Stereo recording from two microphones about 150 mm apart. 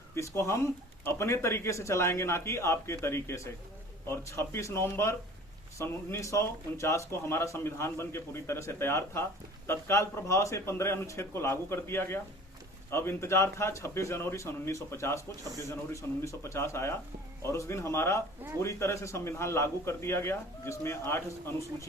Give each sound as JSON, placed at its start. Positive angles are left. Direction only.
{"t": 0.2, "sound": "speech", "side_deg": 20}